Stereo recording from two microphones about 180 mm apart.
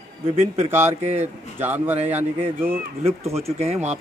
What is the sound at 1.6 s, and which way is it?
Speech, 10° right (ahead or behind).